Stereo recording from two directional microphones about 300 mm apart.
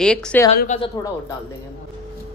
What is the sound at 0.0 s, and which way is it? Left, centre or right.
Speech, centre.